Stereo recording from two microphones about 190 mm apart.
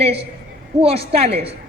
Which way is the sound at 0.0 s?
30° right (ahead or behind).